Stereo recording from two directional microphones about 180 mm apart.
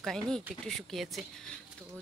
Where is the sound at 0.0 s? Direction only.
Centre (ahead or behind).